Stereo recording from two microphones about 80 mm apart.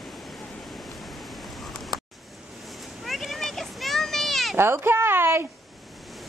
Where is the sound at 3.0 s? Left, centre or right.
Centre.